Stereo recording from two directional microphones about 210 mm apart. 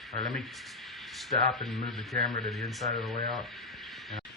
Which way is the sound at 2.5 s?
Centre (ahead or behind).